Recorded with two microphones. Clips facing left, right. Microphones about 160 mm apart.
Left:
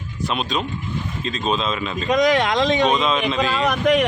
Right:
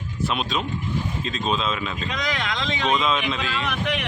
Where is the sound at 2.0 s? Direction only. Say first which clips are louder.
Left 14 dB; 45° left (ahead or behind).